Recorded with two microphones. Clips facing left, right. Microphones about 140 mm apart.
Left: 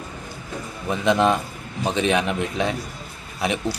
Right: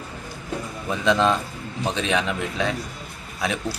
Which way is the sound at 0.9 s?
15° left (ahead or behind).